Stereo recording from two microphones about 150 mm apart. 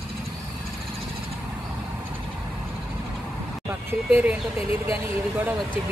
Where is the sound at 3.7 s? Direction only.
15° right (ahead or behind).